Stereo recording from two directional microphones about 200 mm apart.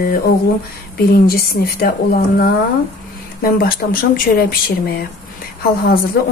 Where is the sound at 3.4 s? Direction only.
45° left (ahead or behind).